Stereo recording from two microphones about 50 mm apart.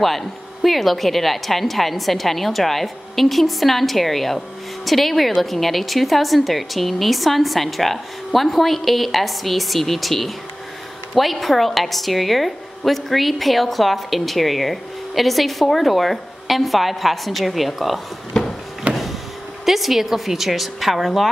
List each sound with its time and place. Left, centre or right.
0.0 s a woman's voice: centre
18.3 s a sound: centre
18.9 s power windows: right
19.6 s a woman's voice: centre